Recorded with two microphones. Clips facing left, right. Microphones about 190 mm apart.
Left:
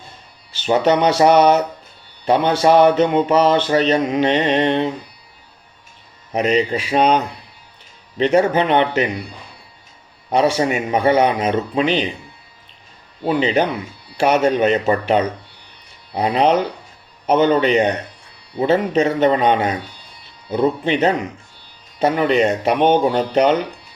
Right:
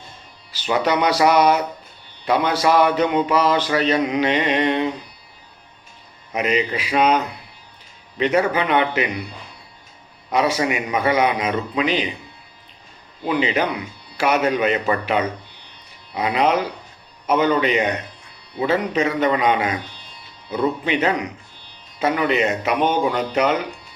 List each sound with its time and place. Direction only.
0.5 s speech: 25° left (ahead or behind)
3.9 s mantra: 45° left (ahead or behind)
4.4 s speech: 30° left (ahead or behind)
6.3 s speech: 30° left (ahead or behind)
8.2 s speech: 30° left (ahead or behind)
10.2 s speech: 30° left (ahead or behind)
13.2 s speech: 30° left (ahead or behind)